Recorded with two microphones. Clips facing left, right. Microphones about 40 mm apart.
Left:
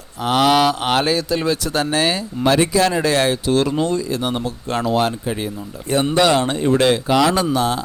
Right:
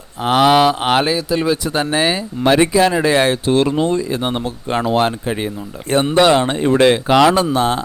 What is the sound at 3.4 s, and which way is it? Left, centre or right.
Speech, right.